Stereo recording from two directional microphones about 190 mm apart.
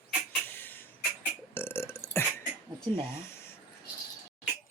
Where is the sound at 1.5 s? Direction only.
15° left (ahead or behind).